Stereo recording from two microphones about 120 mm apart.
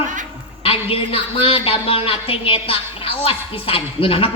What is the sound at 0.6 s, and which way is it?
A woman's voice, 50° left (ahead or behind).